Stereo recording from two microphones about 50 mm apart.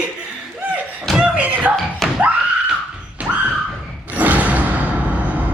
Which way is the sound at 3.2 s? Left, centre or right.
Right.